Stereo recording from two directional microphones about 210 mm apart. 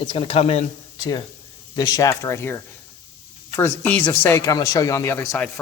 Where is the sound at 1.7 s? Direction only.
15° left (ahead or behind).